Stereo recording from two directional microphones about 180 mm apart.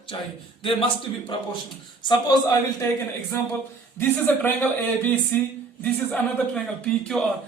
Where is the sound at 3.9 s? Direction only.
10° left (ahead or behind).